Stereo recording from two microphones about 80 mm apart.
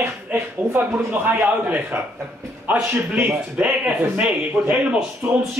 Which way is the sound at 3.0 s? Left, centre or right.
Right.